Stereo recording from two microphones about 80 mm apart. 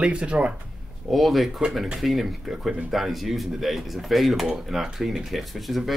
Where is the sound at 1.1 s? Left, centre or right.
Centre.